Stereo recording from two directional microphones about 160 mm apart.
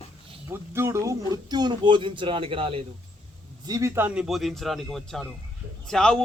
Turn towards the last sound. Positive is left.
turn(degrees=5)  # may be behind; listen again after turning